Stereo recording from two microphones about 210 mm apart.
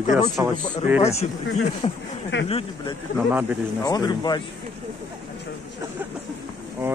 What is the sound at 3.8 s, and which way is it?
Speech, 20° left (ahead or behind).